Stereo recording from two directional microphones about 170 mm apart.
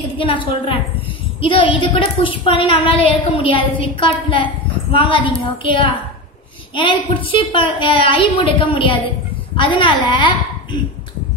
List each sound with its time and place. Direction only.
0.2 s a woman's voice: 30° left (ahead or behind)